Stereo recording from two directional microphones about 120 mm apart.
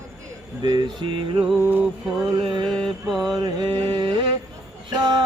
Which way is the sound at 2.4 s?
45° right (ahead or behind).